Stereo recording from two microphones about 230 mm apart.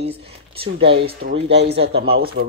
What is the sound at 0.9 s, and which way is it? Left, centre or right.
Speech, right.